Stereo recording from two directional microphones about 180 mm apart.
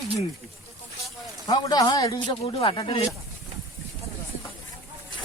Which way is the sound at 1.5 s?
20° left (ahead or behind).